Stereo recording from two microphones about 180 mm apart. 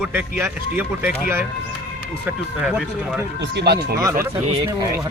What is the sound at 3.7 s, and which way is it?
Speech, 65° right (ahead or behind).